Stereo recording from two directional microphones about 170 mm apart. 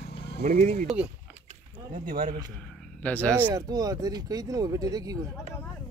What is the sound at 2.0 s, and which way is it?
Speech, 55° right (ahead or behind).